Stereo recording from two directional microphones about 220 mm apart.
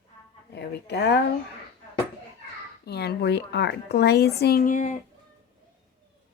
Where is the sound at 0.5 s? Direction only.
50° left (ahead or behind).